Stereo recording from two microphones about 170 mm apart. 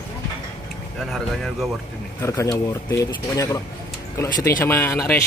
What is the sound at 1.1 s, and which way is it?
Speech, centre (ahead or behind).